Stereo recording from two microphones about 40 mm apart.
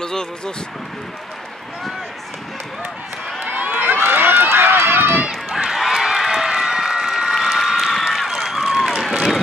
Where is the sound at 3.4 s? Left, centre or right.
Right.